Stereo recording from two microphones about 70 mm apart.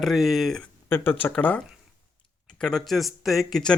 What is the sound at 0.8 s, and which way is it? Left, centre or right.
Speech, left.